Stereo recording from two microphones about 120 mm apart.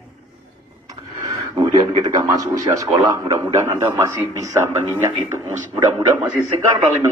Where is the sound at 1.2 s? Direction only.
35° right (ahead or behind).